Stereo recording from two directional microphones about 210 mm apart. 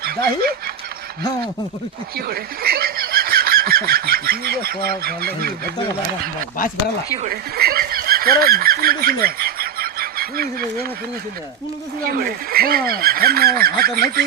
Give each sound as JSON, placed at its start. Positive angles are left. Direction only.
{"t": 2.1, "sound": "speech", "side_deg": -45}
{"t": 7.2, "sound": "a sound", "side_deg": -45}
{"t": 12.0, "sound": "speech", "side_deg": -45}